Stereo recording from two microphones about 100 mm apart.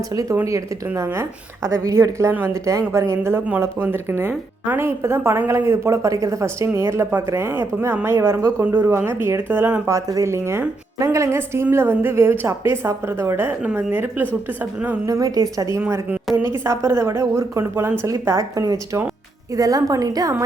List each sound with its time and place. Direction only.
0.1 s a woman's voice: 35° right (ahead or behind); by 9.8 s 20° right (ahead or behind)
9.8 s a woman's voice: 30° right (ahead or behind)
13.6 s a woman's voice: 10° right (ahead or behind)
15.0 s a woman's voice: 35° right (ahead or behind)